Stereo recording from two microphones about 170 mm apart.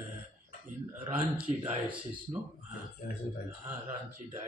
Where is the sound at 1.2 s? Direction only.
10° right (ahead or behind).